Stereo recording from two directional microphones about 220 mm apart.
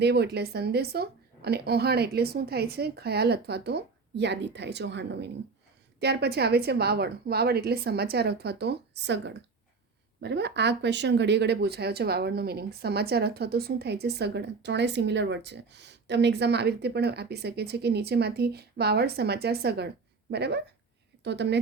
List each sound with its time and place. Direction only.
0.0 s speech: 50° right (ahead or behind)